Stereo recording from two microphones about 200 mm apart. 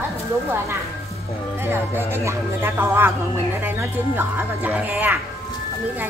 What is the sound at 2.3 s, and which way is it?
Speech, 10° right (ahead or behind).